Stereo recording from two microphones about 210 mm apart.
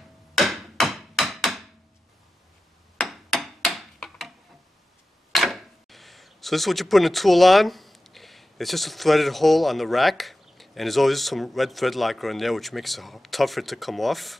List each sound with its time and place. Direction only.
0.3 s hammer: centre (ahead or behind)
3.0 s a sound: centre (ahead or behind)
5.3 s speech: centre (ahead or behind)